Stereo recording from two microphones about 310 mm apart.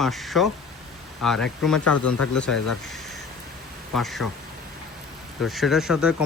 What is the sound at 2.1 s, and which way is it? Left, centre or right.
Speech, left.